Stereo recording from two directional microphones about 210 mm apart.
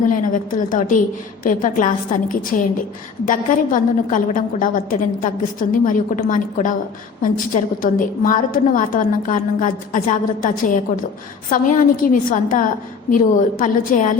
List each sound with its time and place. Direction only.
0.1 s a woman's voice: 40° left (ahead or behind)